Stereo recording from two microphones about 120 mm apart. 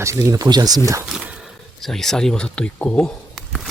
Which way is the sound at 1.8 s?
5° left (ahead or behind).